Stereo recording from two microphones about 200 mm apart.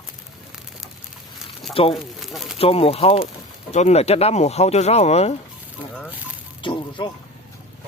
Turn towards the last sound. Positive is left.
turn(degrees=25)  # may be behind; listen again after turning